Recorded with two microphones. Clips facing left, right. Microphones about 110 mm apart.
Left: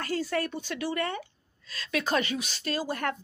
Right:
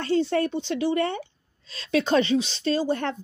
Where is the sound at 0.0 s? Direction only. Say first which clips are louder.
Right 7 dB; 25° right (ahead or behind).